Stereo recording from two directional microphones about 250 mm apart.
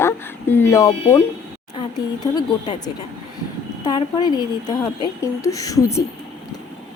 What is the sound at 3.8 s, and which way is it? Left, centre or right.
A woman's voice, centre.